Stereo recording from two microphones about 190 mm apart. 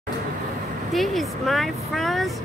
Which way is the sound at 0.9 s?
Centre (ahead or behind).